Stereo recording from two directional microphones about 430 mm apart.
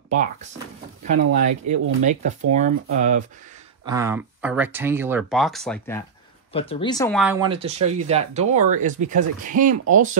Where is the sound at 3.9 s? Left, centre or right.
Centre.